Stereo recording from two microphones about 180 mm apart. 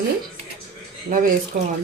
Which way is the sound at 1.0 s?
50° right (ahead or behind).